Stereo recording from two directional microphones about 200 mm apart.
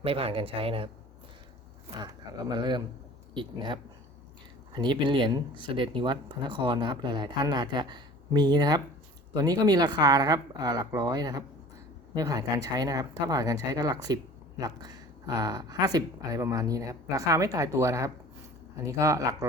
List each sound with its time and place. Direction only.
0.0 s speech: 30° right (ahead or behind)
2.5 s speech: 20° right (ahead or behind)